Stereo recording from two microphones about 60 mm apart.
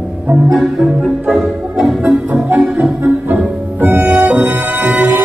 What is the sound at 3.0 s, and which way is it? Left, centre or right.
Music, right.